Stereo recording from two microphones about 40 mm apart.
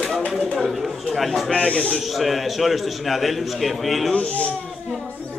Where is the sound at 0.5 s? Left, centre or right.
Centre.